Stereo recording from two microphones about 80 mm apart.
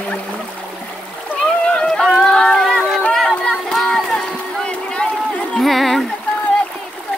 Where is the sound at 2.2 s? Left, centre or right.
Centre.